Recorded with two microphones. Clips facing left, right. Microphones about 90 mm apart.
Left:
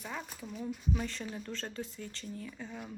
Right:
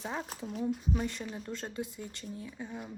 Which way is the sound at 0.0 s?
25° right (ahead or behind).